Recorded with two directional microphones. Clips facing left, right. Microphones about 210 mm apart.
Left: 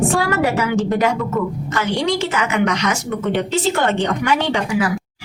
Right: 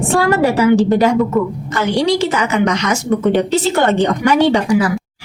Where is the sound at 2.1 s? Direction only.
35° right (ahead or behind).